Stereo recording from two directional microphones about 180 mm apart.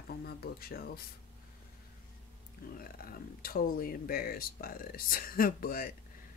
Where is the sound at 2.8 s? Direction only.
55° left (ahead or behind).